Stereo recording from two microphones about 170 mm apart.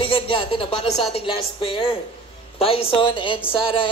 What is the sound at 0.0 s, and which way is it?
A man's voice, 30° left (ahead or behind).